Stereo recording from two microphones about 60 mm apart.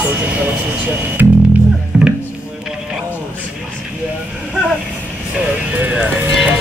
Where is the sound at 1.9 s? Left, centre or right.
Right.